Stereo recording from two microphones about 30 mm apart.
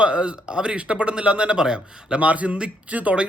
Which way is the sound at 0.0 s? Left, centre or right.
Right.